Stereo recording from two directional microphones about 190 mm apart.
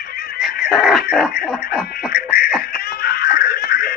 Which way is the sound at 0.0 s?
55° left (ahead or behind).